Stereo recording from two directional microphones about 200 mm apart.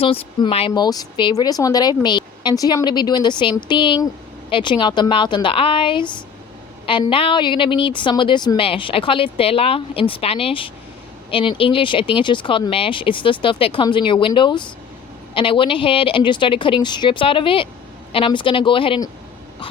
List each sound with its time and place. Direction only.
0.0 s speech: 30° left (ahead or behind)